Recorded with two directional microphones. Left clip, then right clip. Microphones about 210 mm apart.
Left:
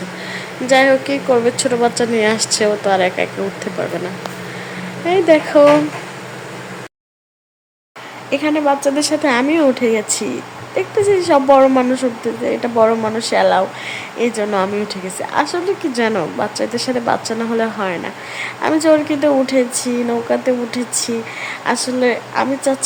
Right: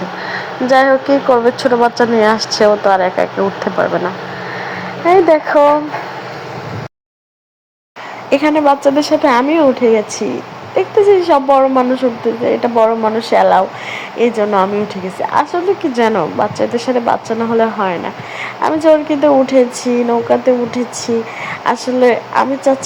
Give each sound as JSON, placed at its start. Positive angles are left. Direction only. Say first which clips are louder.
{"t": 0.7, "sound": "speech", "louder": "right 2 dB", "side_deg": 0}
{"t": 3.0, "sound": "speech", "louder": "right 3 dB", "side_deg": -35}
{"t": 5.0, "sound": "speech", "louder": "right 3 dB", "side_deg": 0}
{"t": 8.3, "sound": "speech", "louder": "right 5 dB", "side_deg": -15}